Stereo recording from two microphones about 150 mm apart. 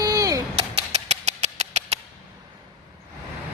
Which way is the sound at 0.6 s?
45° right (ahead or behind).